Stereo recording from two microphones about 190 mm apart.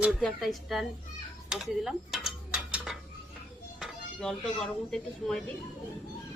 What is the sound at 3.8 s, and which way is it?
Speech, 5° left (ahead or behind).